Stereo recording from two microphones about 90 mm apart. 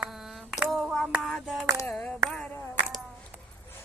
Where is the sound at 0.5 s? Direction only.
Centre (ahead or behind).